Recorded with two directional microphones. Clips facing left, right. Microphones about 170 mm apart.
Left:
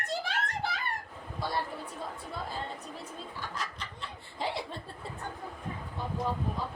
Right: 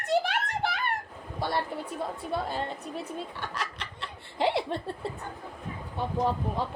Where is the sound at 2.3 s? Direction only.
70° right (ahead or behind).